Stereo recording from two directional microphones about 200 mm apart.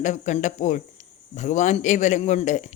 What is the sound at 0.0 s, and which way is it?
Speech, 35° left (ahead or behind).